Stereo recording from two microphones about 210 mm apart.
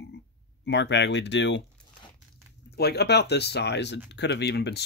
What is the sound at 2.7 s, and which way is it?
Speech, 50° left (ahead or behind).